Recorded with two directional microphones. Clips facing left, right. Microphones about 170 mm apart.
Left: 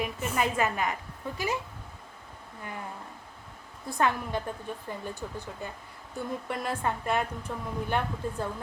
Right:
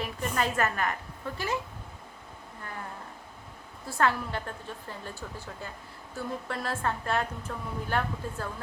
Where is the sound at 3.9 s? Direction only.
15° left (ahead or behind).